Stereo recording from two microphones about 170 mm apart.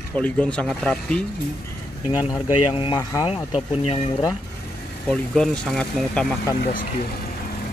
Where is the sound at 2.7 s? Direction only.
30° left (ahead or behind).